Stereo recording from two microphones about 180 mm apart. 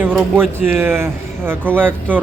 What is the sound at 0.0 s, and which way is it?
Speech, 10° right (ahead or behind).